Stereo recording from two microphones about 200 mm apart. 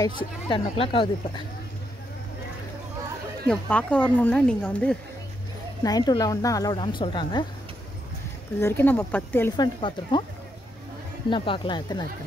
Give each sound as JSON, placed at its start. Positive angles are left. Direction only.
{"t": 0.2, "sound": "a woman's voice", "side_deg": 25}
{"t": 3.4, "sound": "speech", "side_deg": 5}
{"t": 5.9, "sound": "a woman's voice", "side_deg": 20}
{"t": 8.5, "sound": "speech", "side_deg": 10}
{"t": 9.6, "sound": "a woman's voice", "side_deg": 25}
{"t": 11.2, "sound": "a woman's voice", "side_deg": 25}